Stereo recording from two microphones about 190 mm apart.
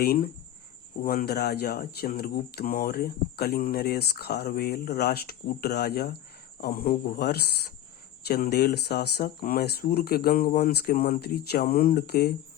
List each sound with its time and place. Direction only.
0.0 s speech: 55° left (ahead or behind)